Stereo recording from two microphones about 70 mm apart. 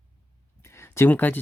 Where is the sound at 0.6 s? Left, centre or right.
Left.